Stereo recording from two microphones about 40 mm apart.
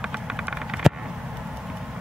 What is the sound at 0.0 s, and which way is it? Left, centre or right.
Vehicle, centre.